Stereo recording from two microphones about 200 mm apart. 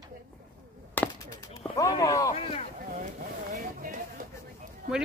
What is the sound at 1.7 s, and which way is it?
Speech, 15° left (ahead or behind).